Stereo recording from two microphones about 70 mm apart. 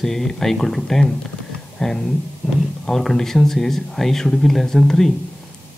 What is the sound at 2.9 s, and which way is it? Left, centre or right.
Speech, centre.